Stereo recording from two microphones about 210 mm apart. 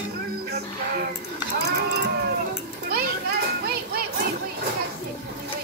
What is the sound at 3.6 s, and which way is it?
Music, 50° right (ahead or behind).